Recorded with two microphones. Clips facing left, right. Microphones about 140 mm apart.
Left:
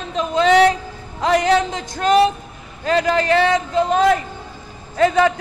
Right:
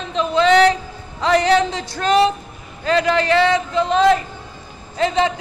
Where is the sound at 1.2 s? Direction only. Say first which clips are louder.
Right 1 dB; 45° left (ahead or behind).